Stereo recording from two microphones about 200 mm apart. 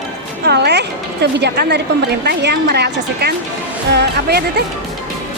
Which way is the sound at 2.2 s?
55° right (ahead or behind).